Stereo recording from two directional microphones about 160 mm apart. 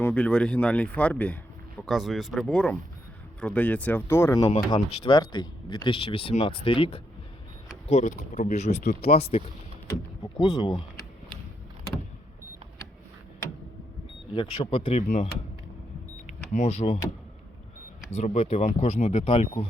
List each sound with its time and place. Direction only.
0.0 s speech: 10° left (ahead or behind); by 7.0 s 35° left (ahead or behind)
7.9 s speech: 50° left (ahead or behind)
10.3 s speech: 25° left (ahead or behind)
14.3 s speech: 30° left (ahead or behind)
14.9 s speech: 50° left (ahead or behind)
16.2 s power windows: 50° left (ahead or behind)
18.1 s speech: 40° left (ahead or behind)
19.2 s speech: 35° left (ahead or behind)